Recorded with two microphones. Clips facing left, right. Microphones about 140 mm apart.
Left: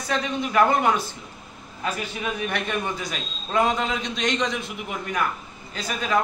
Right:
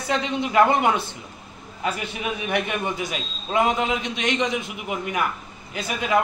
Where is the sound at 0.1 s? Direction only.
20° right (ahead or behind).